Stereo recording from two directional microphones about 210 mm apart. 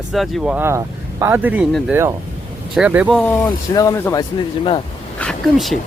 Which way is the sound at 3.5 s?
15° left (ahead or behind).